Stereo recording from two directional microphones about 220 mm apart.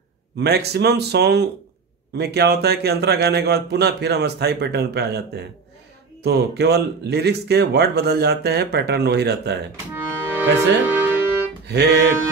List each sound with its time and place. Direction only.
0.4 s a man's voice: 50° right (ahead or behind)
9.9 s music: 10° right (ahead or behind)
11.6 s music: 50° right (ahead or behind)